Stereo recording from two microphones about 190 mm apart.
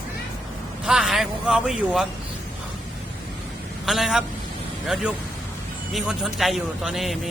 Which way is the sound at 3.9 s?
Centre (ahead or behind).